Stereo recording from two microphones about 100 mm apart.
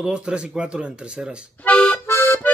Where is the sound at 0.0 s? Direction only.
10° right (ahead or behind).